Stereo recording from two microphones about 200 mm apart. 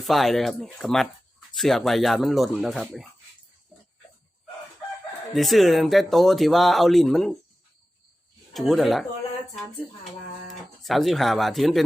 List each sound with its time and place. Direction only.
0.0 s speech: centre (ahead or behind)
5.3 s speech: centre (ahead or behind)
8.5 s speech: centre (ahead or behind)
10.5 s speech: centre (ahead or behind)